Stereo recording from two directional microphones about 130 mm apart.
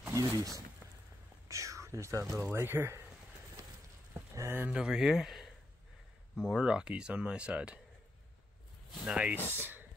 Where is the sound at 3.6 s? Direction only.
25° right (ahead or behind).